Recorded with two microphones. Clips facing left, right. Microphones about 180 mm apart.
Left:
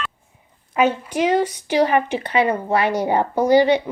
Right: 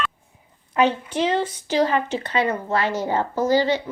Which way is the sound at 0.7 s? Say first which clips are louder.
Left 1 dB; 5° left (ahead or behind).